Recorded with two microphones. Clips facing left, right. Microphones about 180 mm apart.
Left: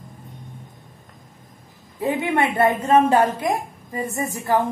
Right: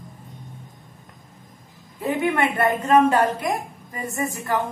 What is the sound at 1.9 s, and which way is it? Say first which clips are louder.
A woman's voice: left 1 dB; 25° left (ahead or behind).